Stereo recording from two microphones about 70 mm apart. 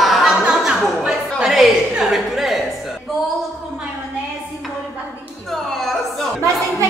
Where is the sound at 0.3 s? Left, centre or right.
Centre.